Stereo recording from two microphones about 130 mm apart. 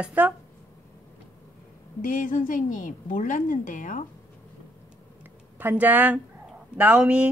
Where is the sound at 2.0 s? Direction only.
85° left.